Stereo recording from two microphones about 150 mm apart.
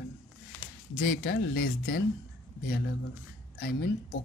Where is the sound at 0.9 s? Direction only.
90° left.